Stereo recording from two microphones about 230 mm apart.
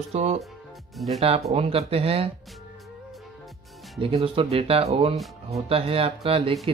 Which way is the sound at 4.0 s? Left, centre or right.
Right.